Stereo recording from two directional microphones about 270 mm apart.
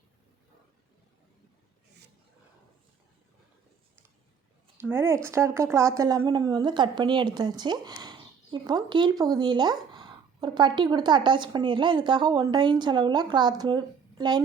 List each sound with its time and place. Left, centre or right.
4.8 s speech: centre